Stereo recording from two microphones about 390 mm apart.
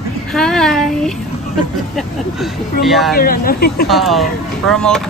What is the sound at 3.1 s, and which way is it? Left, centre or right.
Speech, left.